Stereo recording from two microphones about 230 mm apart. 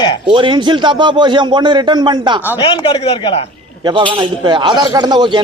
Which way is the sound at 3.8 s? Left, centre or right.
Centre.